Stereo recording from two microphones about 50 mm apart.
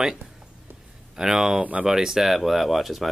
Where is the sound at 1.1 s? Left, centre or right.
Centre.